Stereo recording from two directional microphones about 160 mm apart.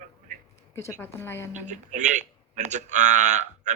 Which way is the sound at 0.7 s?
15° left (ahead or behind).